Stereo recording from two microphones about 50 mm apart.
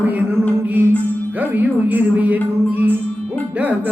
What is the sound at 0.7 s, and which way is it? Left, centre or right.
Music, right.